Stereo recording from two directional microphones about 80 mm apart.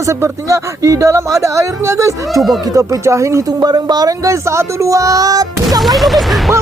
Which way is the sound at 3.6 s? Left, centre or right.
Right.